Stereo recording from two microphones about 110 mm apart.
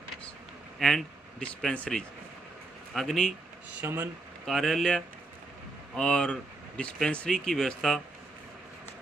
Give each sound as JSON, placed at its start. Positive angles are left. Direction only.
{"t": 0.8, "sound": "speech", "side_deg": 5}
{"t": 3.8, "sound": "speech", "side_deg": -15}
{"t": 4.4, "sound": "speech", "side_deg": 0}